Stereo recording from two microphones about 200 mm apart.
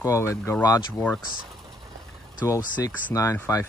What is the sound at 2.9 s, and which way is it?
Speech, 10° left (ahead or behind).